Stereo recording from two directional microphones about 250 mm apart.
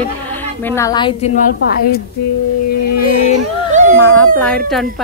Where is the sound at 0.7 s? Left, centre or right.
Centre.